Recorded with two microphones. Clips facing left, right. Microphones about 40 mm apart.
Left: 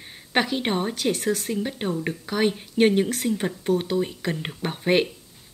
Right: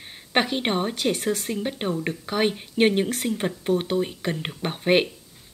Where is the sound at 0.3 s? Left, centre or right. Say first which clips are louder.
Even; centre.